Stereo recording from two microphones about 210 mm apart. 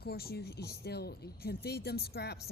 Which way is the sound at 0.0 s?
50° left (ahead or behind).